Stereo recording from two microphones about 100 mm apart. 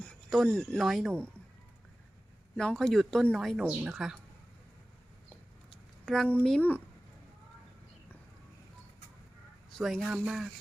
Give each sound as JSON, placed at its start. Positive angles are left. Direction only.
{"t": 0.0, "sound": "a sound", "side_deg": 10}
{"t": 0.3, "sound": "speech", "side_deg": 5}
{"t": 2.6, "sound": "a woman's voice", "side_deg": 5}
{"t": 6.1, "sound": "speech", "side_deg": 5}
{"t": 6.6, "sound": "speech", "side_deg": 15}
{"t": 9.7, "sound": "speech", "side_deg": 0}